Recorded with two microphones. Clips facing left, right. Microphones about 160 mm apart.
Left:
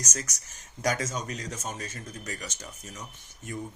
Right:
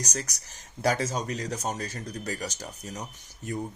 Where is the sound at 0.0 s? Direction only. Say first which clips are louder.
Right 3 dB; 35° right (ahead or behind).